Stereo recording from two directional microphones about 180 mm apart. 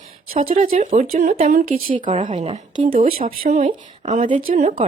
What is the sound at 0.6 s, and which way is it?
A woman's voice, 45° right (ahead or behind).